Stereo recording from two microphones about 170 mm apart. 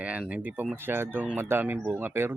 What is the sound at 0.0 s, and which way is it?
Speech, 10° right (ahead or behind).